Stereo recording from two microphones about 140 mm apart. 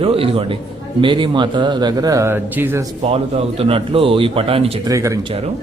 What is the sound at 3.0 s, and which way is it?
A man's voice, 45° right (ahead or behind).